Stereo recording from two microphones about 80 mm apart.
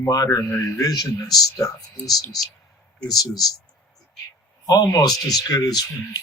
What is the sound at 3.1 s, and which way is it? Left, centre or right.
Speech, left.